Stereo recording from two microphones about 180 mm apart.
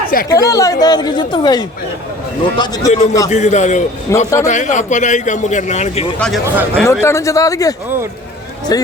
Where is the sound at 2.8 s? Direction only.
40° left (ahead or behind).